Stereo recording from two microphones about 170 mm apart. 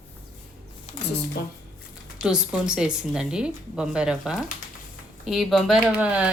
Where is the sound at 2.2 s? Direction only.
5° right (ahead or behind).